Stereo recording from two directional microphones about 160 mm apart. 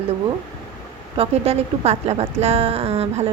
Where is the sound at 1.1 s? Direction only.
40° right (ahead or behind).